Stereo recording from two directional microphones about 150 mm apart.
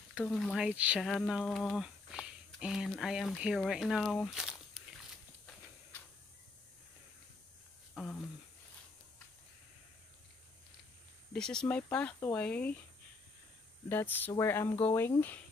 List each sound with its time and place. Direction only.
0.2 s speech: 5° left (ahead or behind)
7.9 s a sound: 5° left (ahead or behind)
11.3 s speech: 5° left (ahead or behind)
13.8 s speech: 15° left (ahead or behind)